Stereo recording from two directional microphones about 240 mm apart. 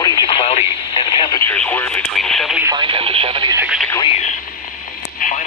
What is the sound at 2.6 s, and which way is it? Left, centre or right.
Speech, centre.